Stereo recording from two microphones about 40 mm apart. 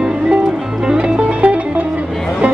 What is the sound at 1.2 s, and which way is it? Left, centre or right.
Music, right.